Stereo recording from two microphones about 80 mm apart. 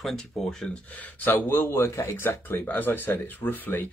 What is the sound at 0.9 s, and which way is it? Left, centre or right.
Speech, left.